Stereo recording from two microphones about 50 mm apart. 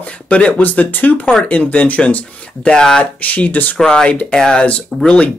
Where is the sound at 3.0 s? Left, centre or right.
Left.